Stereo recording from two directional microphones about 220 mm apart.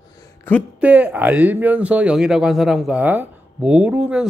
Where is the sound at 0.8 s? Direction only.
5° right (ahead or behind).